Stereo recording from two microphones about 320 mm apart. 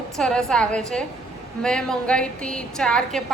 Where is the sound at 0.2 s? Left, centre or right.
Centre.